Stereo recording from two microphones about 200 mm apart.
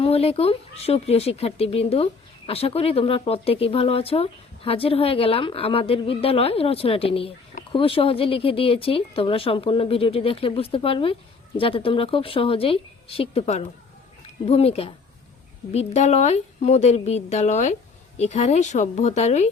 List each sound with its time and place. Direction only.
0.0 s a woman's voice: 30° left (ahead or behind)